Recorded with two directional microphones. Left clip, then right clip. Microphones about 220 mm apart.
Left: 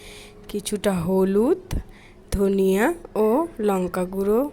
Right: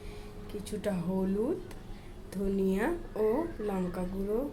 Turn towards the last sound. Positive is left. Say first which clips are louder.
# left 12 dB
turn(degrees=45)  # may be behind; listen again after turning